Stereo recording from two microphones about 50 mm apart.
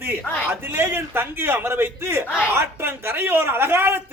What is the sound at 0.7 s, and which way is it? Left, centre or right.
A man's voice, right.